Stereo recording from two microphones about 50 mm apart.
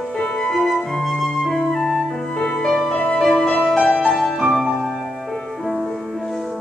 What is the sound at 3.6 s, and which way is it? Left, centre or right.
Music, centre.